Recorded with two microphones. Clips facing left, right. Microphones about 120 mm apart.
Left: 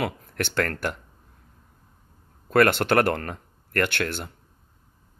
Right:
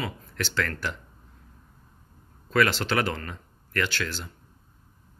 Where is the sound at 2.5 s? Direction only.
55° left (ahead or behind).